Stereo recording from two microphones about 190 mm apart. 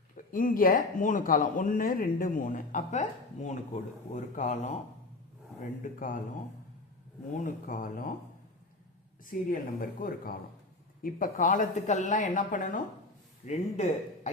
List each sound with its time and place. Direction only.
0.3 s speech: 45° left (ahead or behind)
5.8 s speech: 45° left (ahead or behind)
7.4 s speech: 45° left (ahead or behind)
9.2 s speech: 45° left (ahead or behind)